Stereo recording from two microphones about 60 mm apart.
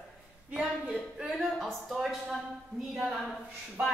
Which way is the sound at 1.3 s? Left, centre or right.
Centre.